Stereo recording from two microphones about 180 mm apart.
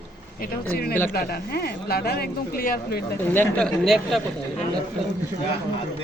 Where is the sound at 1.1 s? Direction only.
60° left (ahead or behind).